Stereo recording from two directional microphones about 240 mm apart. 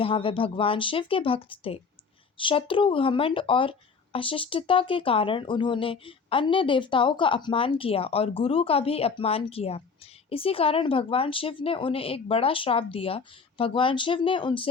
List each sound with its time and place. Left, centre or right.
0.0 s speech: left